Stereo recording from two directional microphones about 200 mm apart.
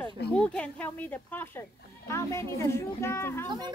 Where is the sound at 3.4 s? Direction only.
20° right (ahead or behind).